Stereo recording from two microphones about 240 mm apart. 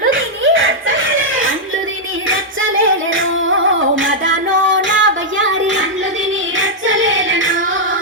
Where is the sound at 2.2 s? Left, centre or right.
Right.